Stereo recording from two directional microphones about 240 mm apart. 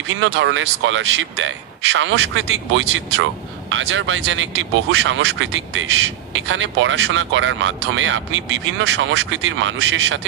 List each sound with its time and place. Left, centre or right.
0.1 s speech: right